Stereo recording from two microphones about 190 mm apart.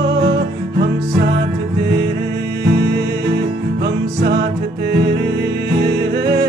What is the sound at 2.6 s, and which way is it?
Music, 70° right (ahead or behind).